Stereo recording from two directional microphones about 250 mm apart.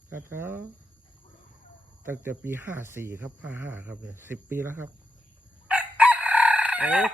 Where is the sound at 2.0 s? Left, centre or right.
Centre.